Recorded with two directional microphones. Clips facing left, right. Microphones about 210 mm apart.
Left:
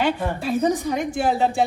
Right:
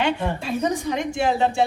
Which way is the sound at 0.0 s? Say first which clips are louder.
Left 1 dB; 5° left (ahead or behind).